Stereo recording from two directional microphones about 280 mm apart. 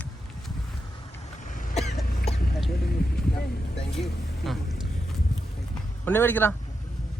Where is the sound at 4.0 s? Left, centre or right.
Centre.